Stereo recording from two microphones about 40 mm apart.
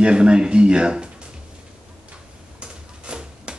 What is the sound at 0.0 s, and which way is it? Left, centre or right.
Speech, right.